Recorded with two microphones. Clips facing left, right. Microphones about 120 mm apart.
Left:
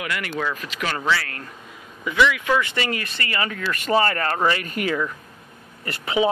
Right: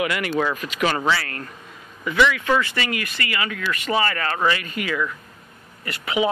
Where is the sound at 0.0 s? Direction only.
15° right (ahead or behind).